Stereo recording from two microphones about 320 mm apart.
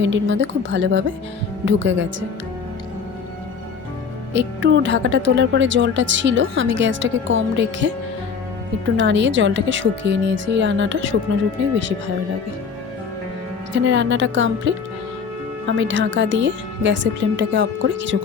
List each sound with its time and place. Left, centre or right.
0.0 s a woman's voice: right
4.4 s a woman's voice: right
9.0 s a woman's voice: right
13.8 s a woman's voice: right